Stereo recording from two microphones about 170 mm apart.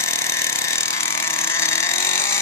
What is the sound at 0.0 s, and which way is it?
Vehicle, 15° left (ahead or behind).